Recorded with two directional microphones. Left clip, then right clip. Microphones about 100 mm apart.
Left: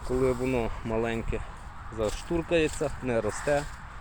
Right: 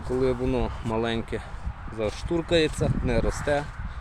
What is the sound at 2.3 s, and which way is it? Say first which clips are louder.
Speech: right 3 dB; 10° right (ahead or behind).